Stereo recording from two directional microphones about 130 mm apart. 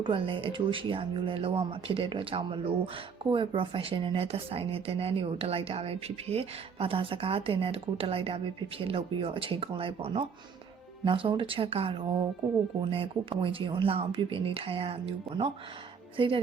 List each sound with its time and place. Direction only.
0.0 s a woman's voice: 40° right (ahead or behind)